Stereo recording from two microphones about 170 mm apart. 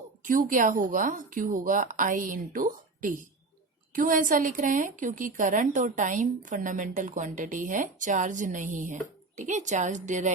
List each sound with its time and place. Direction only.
0.3 s a woman's voice: 50° right (ahead or behind)